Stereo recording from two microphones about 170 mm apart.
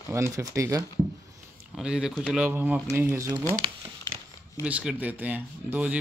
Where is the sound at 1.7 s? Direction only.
5° right (ahead or behind).